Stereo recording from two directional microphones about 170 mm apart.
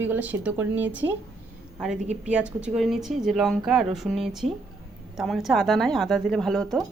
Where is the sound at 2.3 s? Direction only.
5° right (ahead or behind).